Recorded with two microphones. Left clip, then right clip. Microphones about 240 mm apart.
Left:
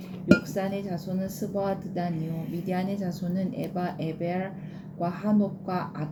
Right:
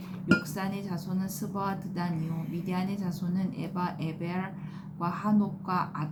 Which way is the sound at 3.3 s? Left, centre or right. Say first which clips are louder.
Left 3 dB; centre.